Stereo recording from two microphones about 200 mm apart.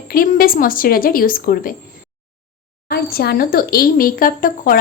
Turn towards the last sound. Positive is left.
turn(degrees=45)  # may be behind; listen again after turning